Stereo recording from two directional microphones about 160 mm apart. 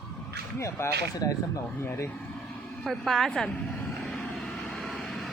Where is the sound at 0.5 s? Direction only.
15° left (ahead or behind).